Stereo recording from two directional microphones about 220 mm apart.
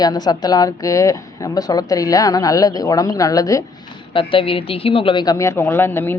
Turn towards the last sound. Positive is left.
turn(degrees=10)  # may be behind; listen again after turning